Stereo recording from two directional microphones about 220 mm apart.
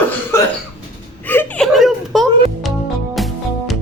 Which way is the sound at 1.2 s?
10° left (ahead or behind).